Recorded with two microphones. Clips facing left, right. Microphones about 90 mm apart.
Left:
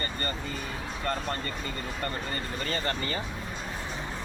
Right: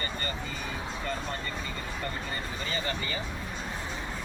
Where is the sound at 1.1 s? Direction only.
60° left (ahead or behind).